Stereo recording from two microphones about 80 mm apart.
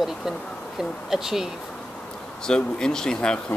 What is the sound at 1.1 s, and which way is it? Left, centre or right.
Speech, centre.